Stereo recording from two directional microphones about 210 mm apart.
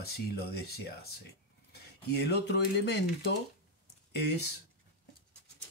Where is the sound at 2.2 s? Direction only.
50° left (ahead or behind).